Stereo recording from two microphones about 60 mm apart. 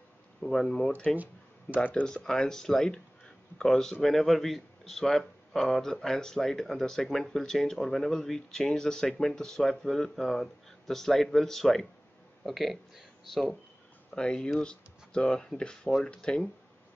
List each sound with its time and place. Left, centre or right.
0.4 s speech: centre
1.1 s a sound: right
1.8 s speech: left
2.0 s speech: centre
14.1 s speech: centre